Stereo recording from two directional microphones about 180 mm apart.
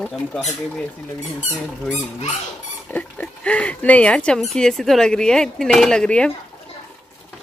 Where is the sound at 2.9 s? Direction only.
5° left (ahead or behind).